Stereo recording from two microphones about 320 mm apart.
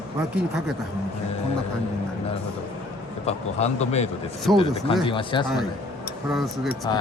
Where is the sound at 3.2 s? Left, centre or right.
Centre.